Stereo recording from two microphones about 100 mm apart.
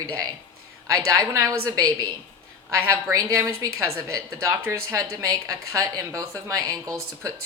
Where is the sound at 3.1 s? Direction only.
30° right (ahead or behind).